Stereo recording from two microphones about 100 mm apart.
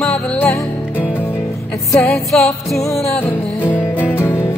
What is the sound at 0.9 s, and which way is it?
Music, 20° left (ahead or behind).